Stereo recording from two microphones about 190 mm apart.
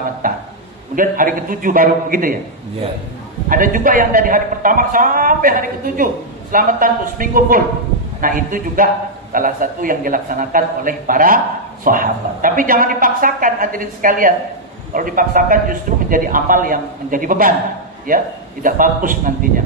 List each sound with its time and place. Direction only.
0.2 s a sound: 45° right (ahead or behind)
0.9 s a man's voice: 45° right (ahead or behind)
3.4 s a man's voice: 45° right (ahead or behind)